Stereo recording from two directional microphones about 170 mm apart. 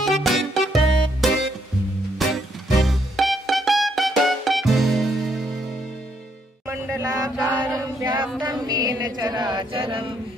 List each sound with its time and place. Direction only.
0.0 s music: centre (ahead or behind)
6.7 s chant: 15° right (ahead or behind)
7.7 s chant: 20° right (ahead or behind)
8.4 s music: 25° right (ahead or behind)